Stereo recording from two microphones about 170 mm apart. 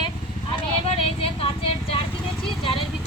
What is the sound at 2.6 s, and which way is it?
Vehicle, 30° left (ahead or behind).